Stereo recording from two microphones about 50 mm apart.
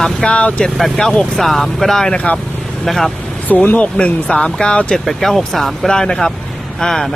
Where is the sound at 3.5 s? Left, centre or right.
Left.